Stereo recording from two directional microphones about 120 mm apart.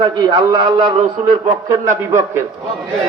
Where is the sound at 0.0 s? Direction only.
35° right (ahead or behind).